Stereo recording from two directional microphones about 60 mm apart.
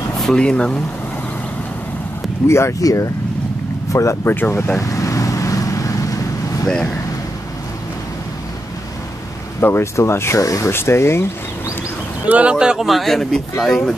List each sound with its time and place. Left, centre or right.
0.2 s speech: centre
2.4 s speech: left
2.8 s speech: left
3.9 s speech: left
4.3 s speech: left
4.7 s vehicle: left
9.6 s speech: left
10.4 s speech: left
10.7 s speech: left
12.3 s speech: right
12.7 s speech: centre